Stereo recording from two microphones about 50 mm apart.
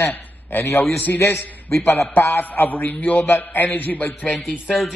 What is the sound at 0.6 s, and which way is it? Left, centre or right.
A man's voice, left.